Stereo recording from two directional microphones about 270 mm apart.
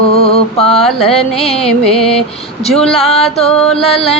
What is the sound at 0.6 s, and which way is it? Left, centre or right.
Mantra, left.